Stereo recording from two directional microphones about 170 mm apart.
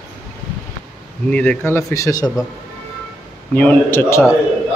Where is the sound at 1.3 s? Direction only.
10° left (ahead or behind).